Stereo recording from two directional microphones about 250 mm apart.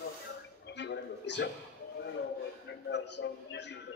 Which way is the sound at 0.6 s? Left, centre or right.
Left.